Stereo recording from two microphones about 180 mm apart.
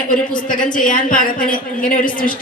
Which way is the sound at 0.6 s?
45° left (ahead or behind).